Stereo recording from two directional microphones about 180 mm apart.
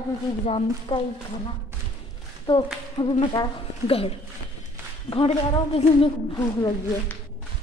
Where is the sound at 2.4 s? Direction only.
25° left (ahead or behind).